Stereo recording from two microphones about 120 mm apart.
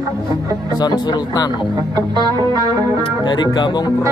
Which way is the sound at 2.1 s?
35° right (ahead or behind).